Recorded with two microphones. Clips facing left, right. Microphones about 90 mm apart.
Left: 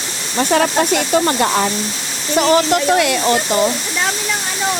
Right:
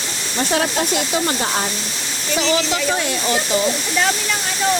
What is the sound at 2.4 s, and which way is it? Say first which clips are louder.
Speech: left 7 dB; 45° left (ahead or behind).